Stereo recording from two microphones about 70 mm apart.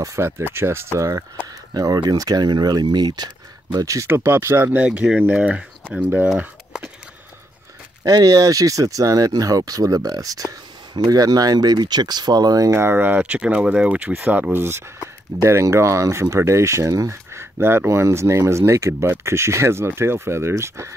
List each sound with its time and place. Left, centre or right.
0.0 s speech: right
1.7 s speech: right
3.7 s speech: right
4.1 s speech: right
4.7 s speech: centre
6.4 s a sound: centre
8.0 s speech: right
12.7 s speech: right
15.4 s speech: right